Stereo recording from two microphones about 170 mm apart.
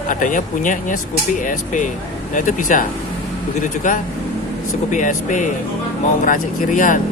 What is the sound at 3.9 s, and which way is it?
Speech, 50° left (ahead or behind).